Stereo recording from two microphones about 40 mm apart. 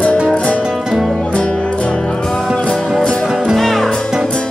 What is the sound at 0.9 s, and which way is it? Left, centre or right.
Music, centre.